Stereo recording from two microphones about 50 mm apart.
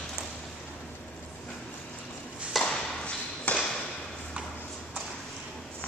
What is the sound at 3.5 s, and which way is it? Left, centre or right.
Ping, left.